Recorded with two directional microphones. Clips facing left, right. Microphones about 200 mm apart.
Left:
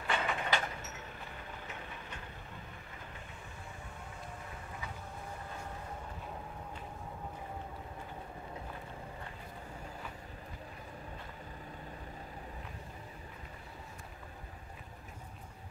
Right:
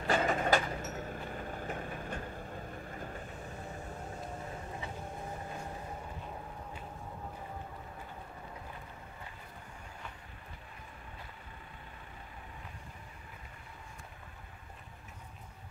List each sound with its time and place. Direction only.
0.0 s vehicle: 40° right (ahead or behind)